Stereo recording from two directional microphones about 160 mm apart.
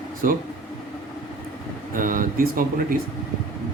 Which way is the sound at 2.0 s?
60° right (ahead or behind).